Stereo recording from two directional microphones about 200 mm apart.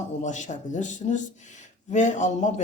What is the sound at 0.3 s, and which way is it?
A man's voice, 40° left (ahead or behind).